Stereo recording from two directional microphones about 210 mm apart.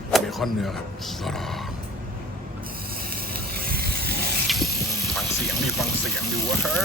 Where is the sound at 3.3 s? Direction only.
45° right (ahead or behind).